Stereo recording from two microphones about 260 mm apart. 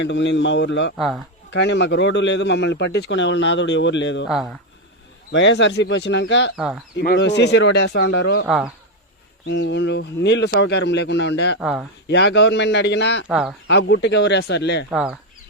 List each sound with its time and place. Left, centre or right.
0.0 s a man's voice: left
0.9 s speech: centre
1.5 s a man's voice: left
4.3 s speech: centre
5.3 s a man's voice: left
8.4 s speech: centre
9.5 s a man's voice: left
11.6 s speech: centre
12.0 s a man's voice: left
13.2 s speech: centre
13.7 s a man's voice: left
14.8 s speech: centre